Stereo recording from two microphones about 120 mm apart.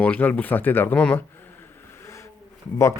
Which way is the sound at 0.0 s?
10° left (ahead or behind).